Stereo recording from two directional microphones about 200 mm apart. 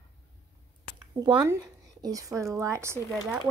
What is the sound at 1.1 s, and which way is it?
Speech, 20° right (ahead or behind).